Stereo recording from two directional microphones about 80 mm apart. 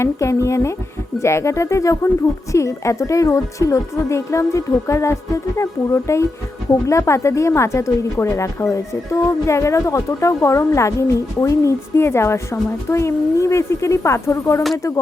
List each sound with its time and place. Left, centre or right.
0.0 s a woman's voice: left